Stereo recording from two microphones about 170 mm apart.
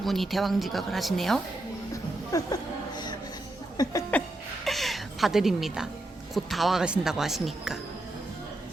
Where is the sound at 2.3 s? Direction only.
20° left (ahead or behind).